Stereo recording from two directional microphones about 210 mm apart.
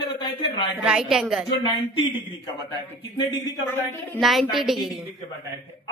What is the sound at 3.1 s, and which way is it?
A man's voice, 20° left (ahead or behind).